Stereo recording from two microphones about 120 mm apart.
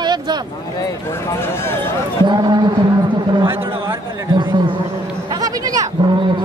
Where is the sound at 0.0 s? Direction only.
35° right (ahead or behind).